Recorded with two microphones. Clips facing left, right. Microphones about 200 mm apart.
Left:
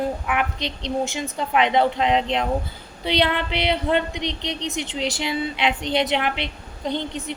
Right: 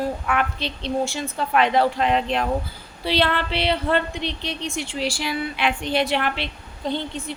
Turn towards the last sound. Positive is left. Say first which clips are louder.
# even
turn(degrees=20)  # may be behind; listen again after turning